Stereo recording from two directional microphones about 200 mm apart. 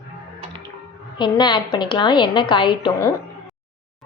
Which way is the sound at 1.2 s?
20° left (ahead or behind).